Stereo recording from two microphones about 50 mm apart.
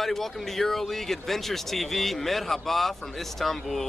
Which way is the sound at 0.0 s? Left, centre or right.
Centre.